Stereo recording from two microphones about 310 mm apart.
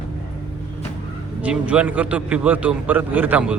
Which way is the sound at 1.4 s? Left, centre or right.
Centre.